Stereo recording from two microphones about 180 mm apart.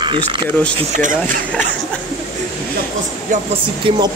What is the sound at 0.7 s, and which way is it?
Speech, 45° right (ahead or behind).